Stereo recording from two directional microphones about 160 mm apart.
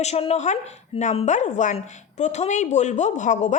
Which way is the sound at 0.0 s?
40° left (ahead or behind).